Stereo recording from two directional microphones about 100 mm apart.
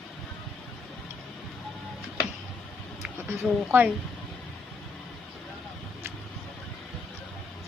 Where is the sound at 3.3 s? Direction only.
20° right (ahead or behind).